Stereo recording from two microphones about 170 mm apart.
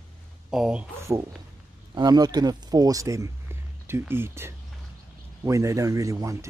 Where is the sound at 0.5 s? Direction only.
5° right (ahead or behind).